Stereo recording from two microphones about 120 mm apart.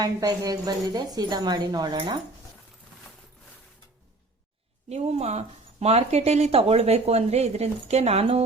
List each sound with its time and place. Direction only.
0.0 s a woman's voice: 30° right (ahead or behind)
4.9 s speech: 65° right (ahead or behind)